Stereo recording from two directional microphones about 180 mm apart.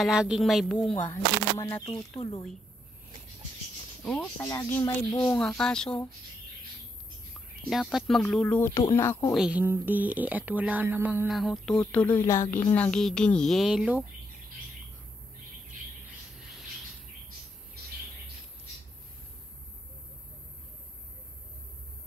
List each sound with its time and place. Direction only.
0.0 s speech: 5° right (ahead or behind)
1.0 s speech: 15° left (ahead or behind)
1.9 s speech: 30° left (ahead or behind)
4.0 s speech: 5° left (ahead or behind)
5.4 s speech: 5° left (ahead or behind)
7.7 s speech: centre (ahead or behind)
9.3 s speech: 5° right (ahead or behind)